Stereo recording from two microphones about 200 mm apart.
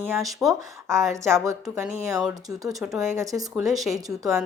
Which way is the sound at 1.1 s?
15° right (ahead or behind).